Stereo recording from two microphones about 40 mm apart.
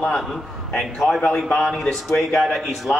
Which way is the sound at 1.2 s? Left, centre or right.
Left.